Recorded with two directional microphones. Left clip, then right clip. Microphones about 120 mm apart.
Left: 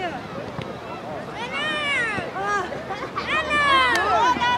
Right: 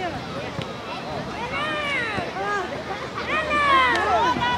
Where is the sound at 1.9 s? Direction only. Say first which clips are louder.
Left 1 dB; 30° left (ahead or behind).